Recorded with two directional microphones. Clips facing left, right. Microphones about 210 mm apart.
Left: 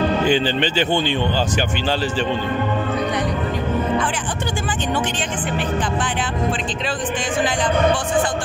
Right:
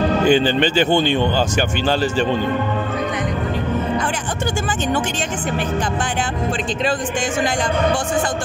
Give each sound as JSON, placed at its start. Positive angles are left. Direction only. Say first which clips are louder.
{"t": 0.3, "sound": "speech", "louder": "right 3 dB", "side_deg": -50}